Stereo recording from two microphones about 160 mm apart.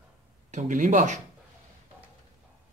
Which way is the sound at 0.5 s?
55° right (ahead or behind).